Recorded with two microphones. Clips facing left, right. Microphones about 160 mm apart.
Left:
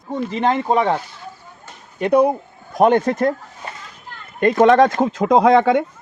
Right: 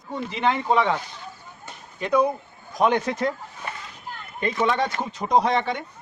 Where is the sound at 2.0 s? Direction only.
65° left (ahead or behind).